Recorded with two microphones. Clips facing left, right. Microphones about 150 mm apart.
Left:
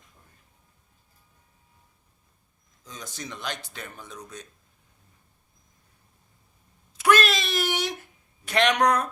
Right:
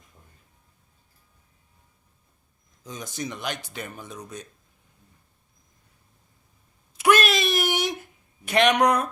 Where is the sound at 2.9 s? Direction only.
15° right (ahead or behind).